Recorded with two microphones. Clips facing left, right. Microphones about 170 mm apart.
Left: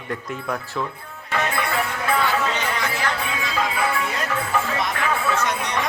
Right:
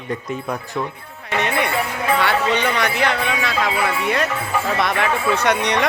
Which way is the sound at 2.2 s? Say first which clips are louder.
Right 6 dB; 75° right (ahead or behind).